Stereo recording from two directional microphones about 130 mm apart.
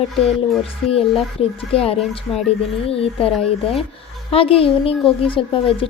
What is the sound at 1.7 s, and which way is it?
Speech, 50° left (ahead or behind).